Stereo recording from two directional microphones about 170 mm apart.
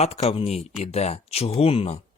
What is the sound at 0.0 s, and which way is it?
Speech, 40° left (ahead or behind).